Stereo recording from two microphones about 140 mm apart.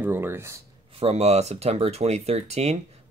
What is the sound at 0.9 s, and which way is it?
Speech, 50° right (ahead or behind).